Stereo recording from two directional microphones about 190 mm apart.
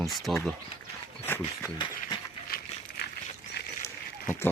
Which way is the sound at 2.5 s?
50° left (ahead or behind).